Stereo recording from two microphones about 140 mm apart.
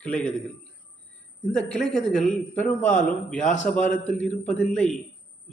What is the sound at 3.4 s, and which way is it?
Speech, 60° left (ahead or behind).